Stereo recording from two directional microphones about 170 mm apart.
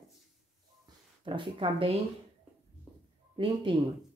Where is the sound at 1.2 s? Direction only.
30° right (ahead or behind).